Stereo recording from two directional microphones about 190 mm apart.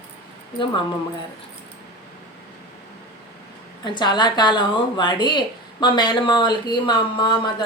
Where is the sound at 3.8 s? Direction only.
25° left (ahead or behind).